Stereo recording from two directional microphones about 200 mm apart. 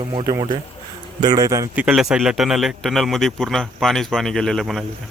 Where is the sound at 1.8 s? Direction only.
Centre (ahead or behind).